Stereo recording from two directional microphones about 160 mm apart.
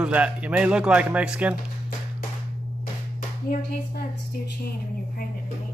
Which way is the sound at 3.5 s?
65° left (ahead or behind).